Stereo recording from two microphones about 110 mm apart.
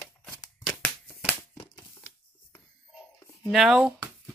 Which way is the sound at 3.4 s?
Centre (ahead or behind).